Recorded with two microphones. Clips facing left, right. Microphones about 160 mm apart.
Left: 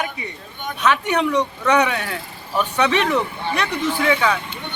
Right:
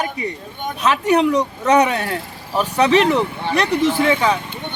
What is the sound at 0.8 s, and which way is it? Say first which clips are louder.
A man's voice: right 3 dB; 35° right (ahead or behind).